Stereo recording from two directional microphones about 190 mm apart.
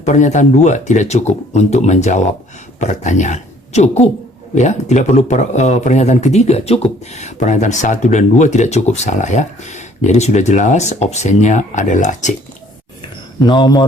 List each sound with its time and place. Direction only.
0.0 s speech: 40° left (ahead or behind)
13.4 s a man's voice: 20° left (ahead or behind)